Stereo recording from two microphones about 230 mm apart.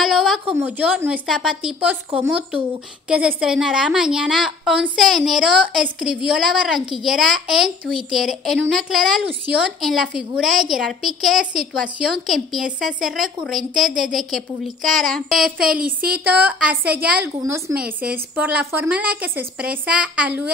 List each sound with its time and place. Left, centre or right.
0.0 s a woman's voice: centre
15.8 s speech: right
16.3 s a woman's voice: centre